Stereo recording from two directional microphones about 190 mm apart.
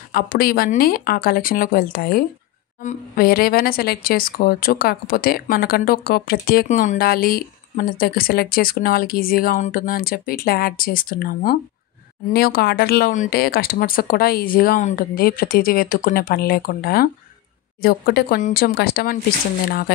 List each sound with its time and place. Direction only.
0.1 s speech: 50° left (ahead or behind)
2.8 s a woman's voice: 40° left (ahead or behind)
3.3 s speech: 50° left (ahead or behind)